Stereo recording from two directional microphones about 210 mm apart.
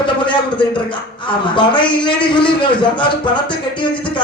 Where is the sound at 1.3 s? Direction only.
20° left (ahead or behind).